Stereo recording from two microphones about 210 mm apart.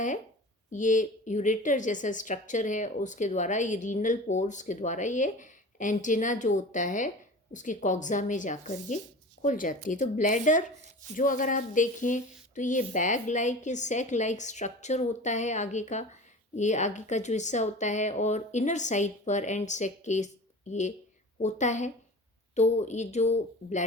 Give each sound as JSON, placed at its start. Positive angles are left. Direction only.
{"t": 0.7, "sound": "a woman's voice", "side_deg": 35}